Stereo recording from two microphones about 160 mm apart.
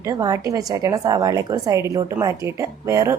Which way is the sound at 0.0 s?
20° right (ahead or behind).